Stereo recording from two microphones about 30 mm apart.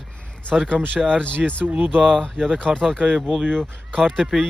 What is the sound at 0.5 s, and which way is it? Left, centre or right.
Speech, centre.